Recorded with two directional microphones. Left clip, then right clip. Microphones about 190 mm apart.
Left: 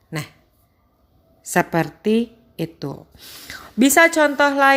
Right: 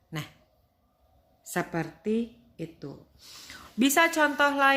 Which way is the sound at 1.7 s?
45° left (ahead or behind).